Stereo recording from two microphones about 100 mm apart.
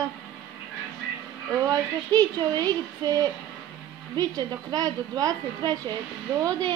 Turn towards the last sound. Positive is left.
turn(degrees=-35)  # may be behind; listen again after turning